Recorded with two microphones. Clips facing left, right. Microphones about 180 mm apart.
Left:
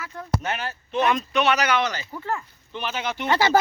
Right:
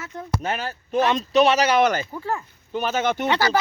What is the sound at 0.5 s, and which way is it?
Speech, 40° right (ahead or behind).